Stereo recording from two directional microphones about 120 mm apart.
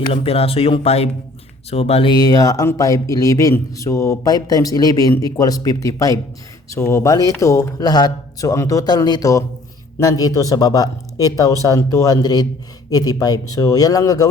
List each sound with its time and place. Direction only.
0.1 s speech: 55° left (ahead or behind)
2.1 s speech: 30° left (ahead or behind)